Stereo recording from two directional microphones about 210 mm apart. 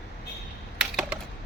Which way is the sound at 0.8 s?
5° right (ahead or behind).